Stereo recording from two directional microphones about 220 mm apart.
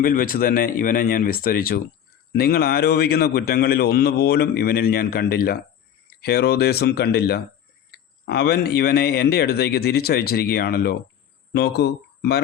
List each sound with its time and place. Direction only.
0.0 s a man's voice: 40° left (ahead or behind)